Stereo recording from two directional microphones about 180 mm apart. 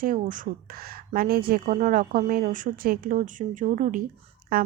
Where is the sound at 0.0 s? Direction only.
50° right (ahead or behind).